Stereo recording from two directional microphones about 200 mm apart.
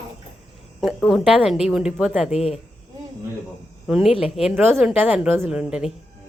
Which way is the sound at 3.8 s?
Centre (ahead or behind).